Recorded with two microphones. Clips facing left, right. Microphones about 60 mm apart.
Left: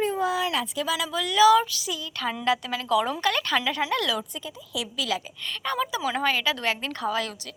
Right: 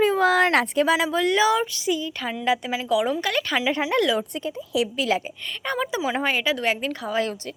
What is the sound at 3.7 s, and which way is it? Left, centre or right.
Speech, right.